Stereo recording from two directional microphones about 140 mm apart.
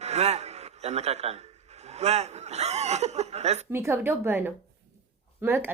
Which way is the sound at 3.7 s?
20° right (ahead or behind).